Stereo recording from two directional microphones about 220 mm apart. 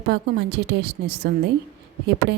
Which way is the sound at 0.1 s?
50° right (ahead or behind).